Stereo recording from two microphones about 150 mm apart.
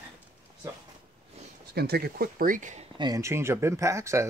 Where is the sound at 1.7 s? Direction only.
90° right; by 2.8 s 55° right (ahead or behind).